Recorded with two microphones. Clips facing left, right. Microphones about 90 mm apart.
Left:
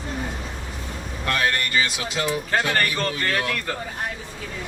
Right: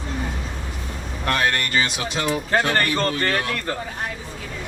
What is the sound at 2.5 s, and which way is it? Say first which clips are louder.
A man's voice: right 4 dB; 30° right (ahead or behind).